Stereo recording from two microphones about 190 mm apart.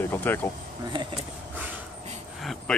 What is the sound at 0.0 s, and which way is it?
Speech, 10° left (ahead or behind).